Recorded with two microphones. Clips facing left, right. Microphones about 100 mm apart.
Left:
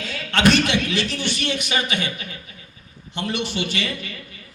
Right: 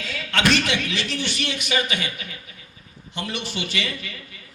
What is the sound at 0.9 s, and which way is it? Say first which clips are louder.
A man's voice: left 3 dB; 40° left (ahead or behind).